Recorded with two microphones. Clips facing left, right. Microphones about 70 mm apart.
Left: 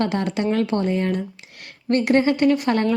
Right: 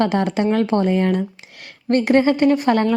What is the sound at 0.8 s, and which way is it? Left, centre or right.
Speech, right.